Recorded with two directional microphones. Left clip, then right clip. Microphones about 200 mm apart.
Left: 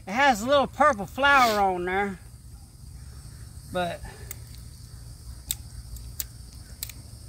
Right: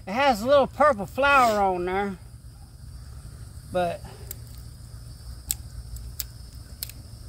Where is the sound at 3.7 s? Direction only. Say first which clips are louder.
Right 3 dB; 15° right (ahead or behind).